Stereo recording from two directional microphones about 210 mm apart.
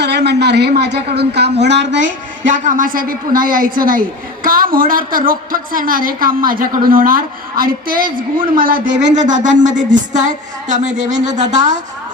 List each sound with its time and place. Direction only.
0.0 s a woman's voice: 50° right (ahead or behind)
2.6 s a woman's voice: 40° right (ahead or behind)